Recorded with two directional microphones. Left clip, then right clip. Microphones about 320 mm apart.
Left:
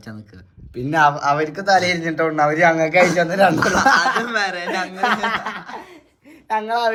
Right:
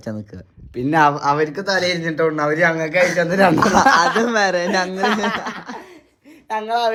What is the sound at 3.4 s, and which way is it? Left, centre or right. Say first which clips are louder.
Speech: right 1 dB; right.